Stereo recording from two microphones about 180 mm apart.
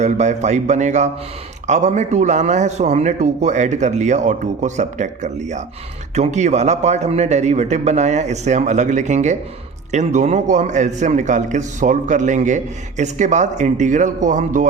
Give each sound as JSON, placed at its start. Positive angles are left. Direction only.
{"t": 0.0, "sound": "a man's voice", "side_deg": -40}